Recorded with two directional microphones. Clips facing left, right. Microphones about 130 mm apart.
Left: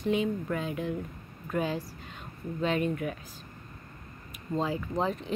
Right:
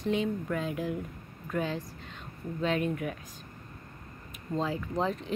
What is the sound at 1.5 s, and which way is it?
Speech, 10° left (ahead or behind).